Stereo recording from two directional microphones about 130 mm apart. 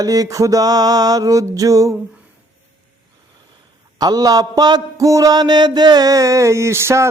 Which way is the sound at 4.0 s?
30° right (ahead or behind).